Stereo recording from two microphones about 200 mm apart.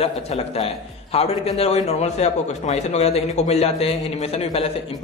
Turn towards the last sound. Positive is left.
turn(degrees=30)  # may be behind; listen again after turning